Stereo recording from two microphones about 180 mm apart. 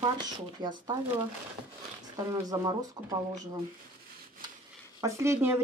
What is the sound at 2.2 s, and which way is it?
Speech, 20° right (ahead or behind).